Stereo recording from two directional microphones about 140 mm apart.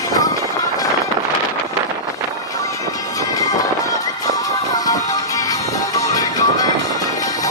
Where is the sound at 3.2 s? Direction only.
25° left (ahead or behind).